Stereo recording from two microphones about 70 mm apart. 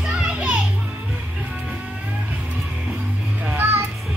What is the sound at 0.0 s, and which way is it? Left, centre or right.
Children playing, centre.